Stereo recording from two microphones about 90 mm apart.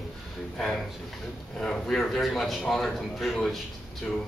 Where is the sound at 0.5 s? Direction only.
5° left (ahead or behind).